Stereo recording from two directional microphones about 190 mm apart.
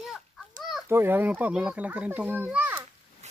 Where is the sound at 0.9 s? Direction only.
10° right (ahead or behind).